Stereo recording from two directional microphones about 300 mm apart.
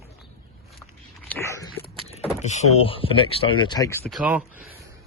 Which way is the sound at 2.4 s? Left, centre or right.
Left.